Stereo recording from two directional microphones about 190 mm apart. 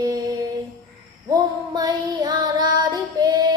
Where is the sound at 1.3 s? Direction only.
20° right (ahead or behind).